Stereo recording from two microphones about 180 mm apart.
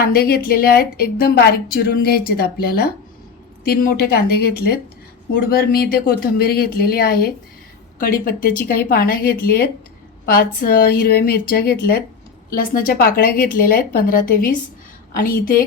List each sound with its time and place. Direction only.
0.0 s a woman's voice: 60° left (ahead or behind)